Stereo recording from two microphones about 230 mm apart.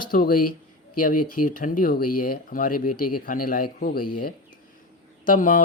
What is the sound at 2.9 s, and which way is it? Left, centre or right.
Speech, left.